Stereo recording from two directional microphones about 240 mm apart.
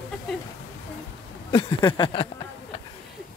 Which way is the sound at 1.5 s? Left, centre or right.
Left.